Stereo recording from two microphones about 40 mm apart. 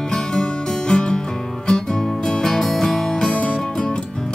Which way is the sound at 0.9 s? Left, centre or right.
Centre.